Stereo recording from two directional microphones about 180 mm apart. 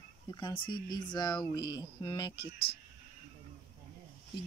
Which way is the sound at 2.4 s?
60° left (ahead or behind).